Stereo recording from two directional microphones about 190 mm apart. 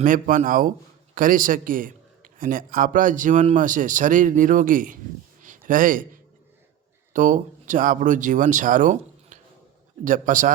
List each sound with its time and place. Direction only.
0.0 s a man's voice: 45° right (ahead or behind)
5.4 s a sound: 45° right (ahead or behind)
7.1 s a man's voice: 40° right (ahead or behind)